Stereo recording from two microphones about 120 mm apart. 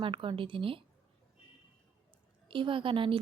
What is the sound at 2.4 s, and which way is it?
Speech, 45° right (ahead or behind).